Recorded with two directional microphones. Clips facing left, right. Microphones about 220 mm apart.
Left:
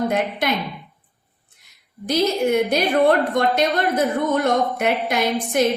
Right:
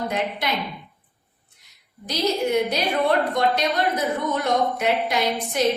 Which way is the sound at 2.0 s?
50° left (ahead or behind).